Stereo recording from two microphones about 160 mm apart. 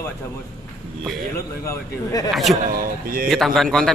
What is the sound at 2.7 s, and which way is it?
Speech, 65° right (ahead or behind).